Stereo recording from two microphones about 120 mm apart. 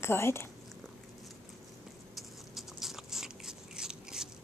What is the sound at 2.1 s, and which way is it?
Biting, centre (ahead or behind).